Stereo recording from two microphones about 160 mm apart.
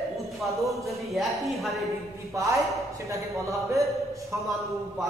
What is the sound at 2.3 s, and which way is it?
A man's voice, 20° right (ahead or behind).